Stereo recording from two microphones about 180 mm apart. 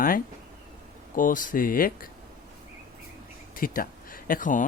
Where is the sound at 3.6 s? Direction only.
50° left (ahead or behind).